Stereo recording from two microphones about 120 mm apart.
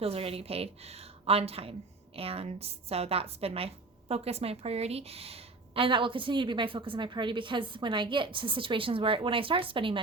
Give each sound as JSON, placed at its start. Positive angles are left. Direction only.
{"t": 0.0, "sound": "a woman's voice", "side_deg": -55}